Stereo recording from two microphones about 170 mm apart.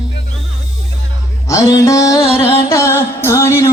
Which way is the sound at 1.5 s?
20° left (ahead or behind).